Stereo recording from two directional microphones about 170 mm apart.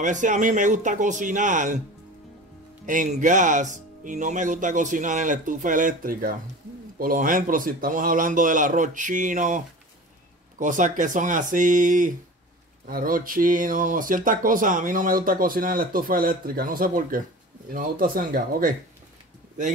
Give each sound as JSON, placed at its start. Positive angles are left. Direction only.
{"t": 0.0, "sound": "speech", "side_deg": -45}
{"t": 2.9, "sound": "speech", "side_deg": -50}
{"t": 10.6, "sound": "speech", "side_deg": -50}